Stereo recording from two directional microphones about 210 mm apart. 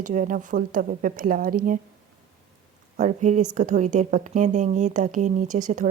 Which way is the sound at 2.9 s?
35° right (ahead or behind).